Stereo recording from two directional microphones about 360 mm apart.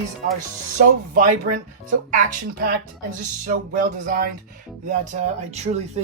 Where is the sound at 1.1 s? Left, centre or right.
Right.